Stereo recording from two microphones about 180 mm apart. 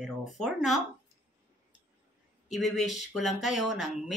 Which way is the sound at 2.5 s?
Centre (ahead or behind).